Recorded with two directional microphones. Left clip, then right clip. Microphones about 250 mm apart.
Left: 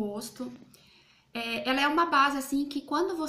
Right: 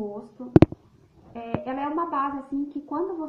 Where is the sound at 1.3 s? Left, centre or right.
Left.